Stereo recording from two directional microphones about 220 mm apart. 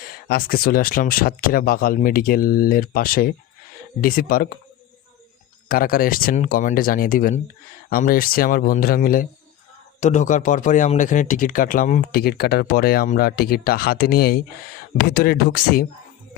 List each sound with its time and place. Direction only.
0.3 s speech: 45° left (ahead or behind)
5.6 s speech: 40° left (ahead or behind)